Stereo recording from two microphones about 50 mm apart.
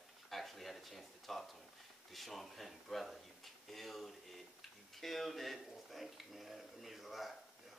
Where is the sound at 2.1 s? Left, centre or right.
Centre.